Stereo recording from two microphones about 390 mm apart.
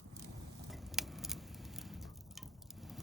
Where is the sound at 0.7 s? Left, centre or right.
Centre.